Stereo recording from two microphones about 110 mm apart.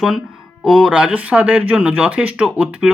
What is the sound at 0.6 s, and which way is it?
Speech, centre (ahead or behind).